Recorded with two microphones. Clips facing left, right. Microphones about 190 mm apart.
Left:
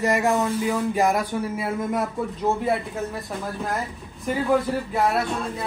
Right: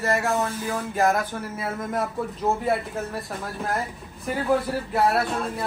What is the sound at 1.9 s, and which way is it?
A man's voice, centre (ahead or behind).